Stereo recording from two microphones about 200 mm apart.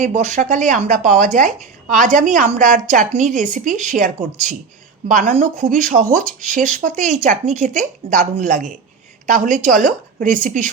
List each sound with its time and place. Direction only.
0.0 s speech: 35° right (ahead or behind)